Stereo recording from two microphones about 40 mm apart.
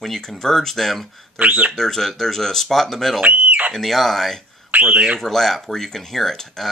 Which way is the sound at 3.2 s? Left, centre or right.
Right.